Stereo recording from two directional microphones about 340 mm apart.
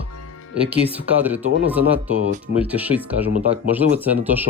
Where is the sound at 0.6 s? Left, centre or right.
Centre.